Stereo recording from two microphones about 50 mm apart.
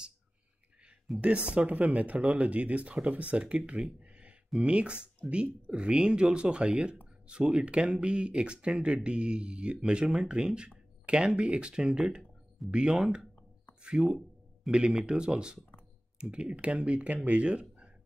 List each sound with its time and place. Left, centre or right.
1.2 s speech: right
3.8 s a sound: right
4.6 s speech: right
12.6 s speech: centre
12.9 s speech: centre